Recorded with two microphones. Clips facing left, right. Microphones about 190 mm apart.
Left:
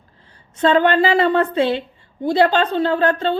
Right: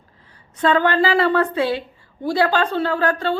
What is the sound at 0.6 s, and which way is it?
A woman's voice, 25° left (ahead or behind).